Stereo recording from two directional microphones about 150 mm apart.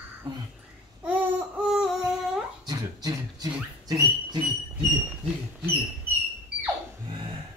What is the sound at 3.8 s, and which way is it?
Dog, 25° right (ahead or behind).